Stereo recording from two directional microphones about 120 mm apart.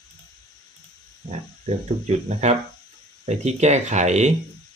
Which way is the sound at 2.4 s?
75° right (ahead or behind).